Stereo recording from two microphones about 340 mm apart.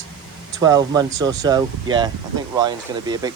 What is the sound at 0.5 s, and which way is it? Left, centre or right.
Speech, centre.